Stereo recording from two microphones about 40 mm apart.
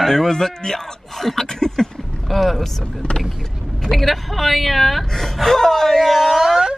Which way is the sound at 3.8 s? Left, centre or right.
Centre.